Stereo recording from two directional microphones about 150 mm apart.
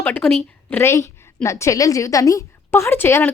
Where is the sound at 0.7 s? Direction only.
15° left (ahead or behind).